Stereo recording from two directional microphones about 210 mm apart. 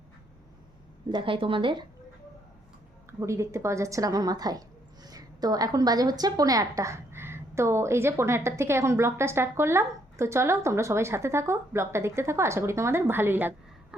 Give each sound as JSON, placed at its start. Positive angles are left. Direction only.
{"t": 1.1, "sound": "speech", "side_deg": -25}
{"t": 3.1, "sound": "a woman's voice", "side_deg": -15}